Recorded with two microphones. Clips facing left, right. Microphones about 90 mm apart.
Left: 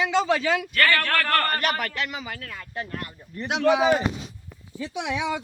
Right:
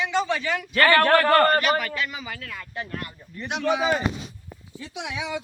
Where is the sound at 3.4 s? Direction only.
85° left; by 3.8 s 70° left (ahead or behind).